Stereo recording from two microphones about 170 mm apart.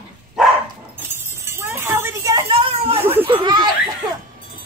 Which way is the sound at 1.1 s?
15° right (ahead or behind).